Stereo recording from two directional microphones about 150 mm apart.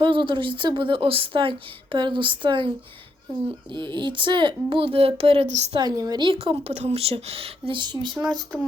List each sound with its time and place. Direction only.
0.0 s a woman's voice: 35° right (ahead or behind)
3.8 s a woman's voice: 30° right (ahead or behind)
5.8 s a woman's voice: 25° right (ahead or behind)